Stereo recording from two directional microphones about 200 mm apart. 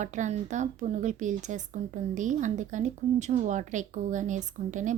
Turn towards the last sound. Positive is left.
turn(degrees=-40)  # may be behind; listen again after turning